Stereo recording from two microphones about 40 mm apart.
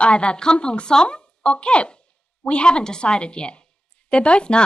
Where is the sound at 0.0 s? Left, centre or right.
Left.